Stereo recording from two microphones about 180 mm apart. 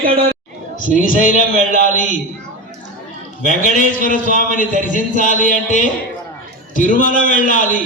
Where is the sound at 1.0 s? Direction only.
50° left (ahead or behind).